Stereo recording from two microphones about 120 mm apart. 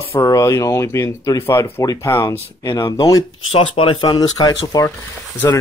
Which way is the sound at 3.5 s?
50° left (ahead or behind).